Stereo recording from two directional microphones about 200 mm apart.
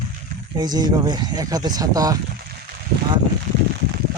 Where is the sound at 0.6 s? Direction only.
20° right (ahead or behind).